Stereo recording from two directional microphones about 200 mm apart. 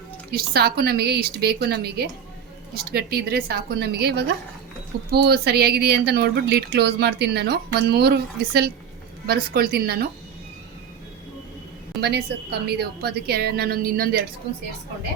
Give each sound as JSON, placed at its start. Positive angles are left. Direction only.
{"t": 0.3, "sound": "speech", "side_deg": -50}
{"t": 11.9, "sound": "speech", "side_deg": -55}